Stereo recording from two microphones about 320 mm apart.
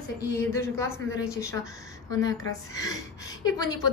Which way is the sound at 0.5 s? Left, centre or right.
Centre.